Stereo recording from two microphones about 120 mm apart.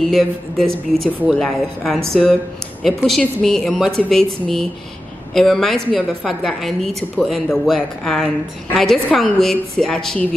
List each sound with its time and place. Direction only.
0.1 s a woman's voice: centre (ahead or behind)